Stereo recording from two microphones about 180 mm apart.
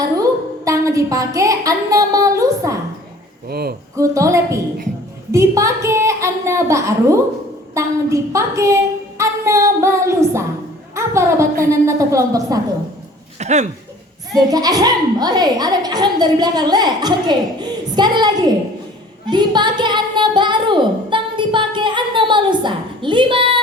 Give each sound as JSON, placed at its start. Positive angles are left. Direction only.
{"t": 0.0, "sound": "a sound", "side_deg": -20}
{"t": 3.5, "sound": "speech", "side_deg": -60}
{"t": 3.9, "sound": "a woman's voice", "side_deg": -15}
{"t": 7.7, "sound": "child singing", "side_deg": -15}
{"t": 10.9, "sound": "a woman's voice", "side_deg": -15}
{"t": 13.4, "sound": "speech", "side_deg": -40}
{"t": 14.3, "sound": "a woman's voice", "side_deg": -20}